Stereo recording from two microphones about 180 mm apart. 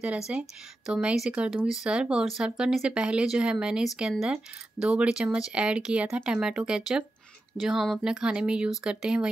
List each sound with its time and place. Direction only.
0.3 s speech: 5° right (ahead or behind)